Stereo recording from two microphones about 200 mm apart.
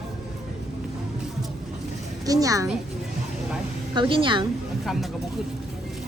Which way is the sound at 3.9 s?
25° right (ahead or behind).